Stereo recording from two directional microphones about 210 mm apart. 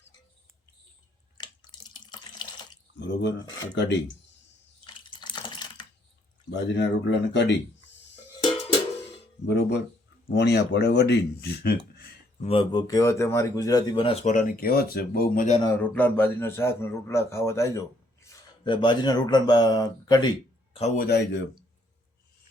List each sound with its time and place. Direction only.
1.4 s water tap: 20° left (ahead or behind)
3.0 s speech: 55° left (ahead or behind)
5.2 s a sound: 20° left (ahead or behind)
6.5 s speech: 55° left (ahead or behind)
9.5 s speech: 55° left (ahead or behind)
12.4 s speech: 25° left (ahead or behind)
15.6 s speech: 10° left (ahead or behind)
20.7 s speech: 35° left (ahead or behind); by 21.4 s 55° left (ahead or behind)